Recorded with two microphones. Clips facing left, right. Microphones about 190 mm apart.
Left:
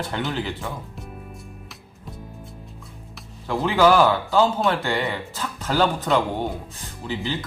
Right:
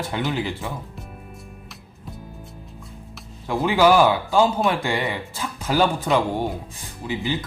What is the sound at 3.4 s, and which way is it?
Speech, 10° right (ahead or behind).